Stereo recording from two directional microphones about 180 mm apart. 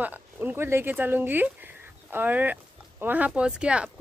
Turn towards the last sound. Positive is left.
turn(degrees=-5)  # may be behind; listen again after turning